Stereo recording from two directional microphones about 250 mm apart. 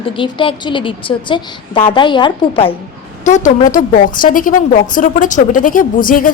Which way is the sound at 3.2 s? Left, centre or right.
Left.